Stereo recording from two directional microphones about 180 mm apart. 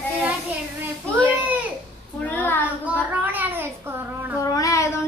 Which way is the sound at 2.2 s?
10° left (ahead or behind).